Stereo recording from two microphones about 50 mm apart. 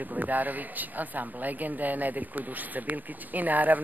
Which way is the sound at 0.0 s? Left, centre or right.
Right.